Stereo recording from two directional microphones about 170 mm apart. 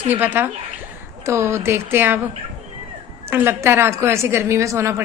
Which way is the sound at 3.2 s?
15° right (ahead or behind).